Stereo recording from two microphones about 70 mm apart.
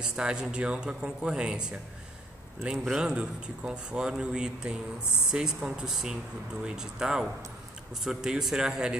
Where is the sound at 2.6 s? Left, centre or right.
Centre.